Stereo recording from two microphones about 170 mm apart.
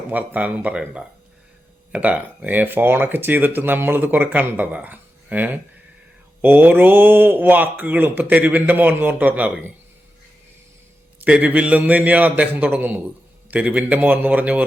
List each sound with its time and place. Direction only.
0.1 s speech: 10° right (ahead or behind)
11.2 s speech: 10° right (ahead or behind)